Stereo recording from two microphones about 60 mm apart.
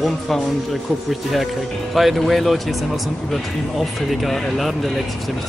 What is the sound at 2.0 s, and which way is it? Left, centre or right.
Speech, centre.